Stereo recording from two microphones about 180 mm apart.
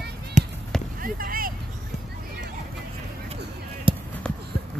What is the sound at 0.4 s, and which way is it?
Basketball bounce, 45° right (ahead or behind).